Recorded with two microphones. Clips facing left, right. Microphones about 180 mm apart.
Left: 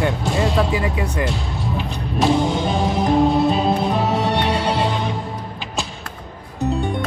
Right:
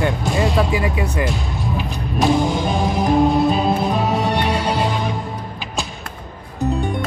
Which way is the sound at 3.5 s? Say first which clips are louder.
Even; 30° left (ahead or behind).